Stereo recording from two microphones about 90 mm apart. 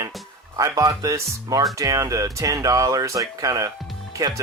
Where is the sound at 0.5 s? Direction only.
45° right (ahead or behind).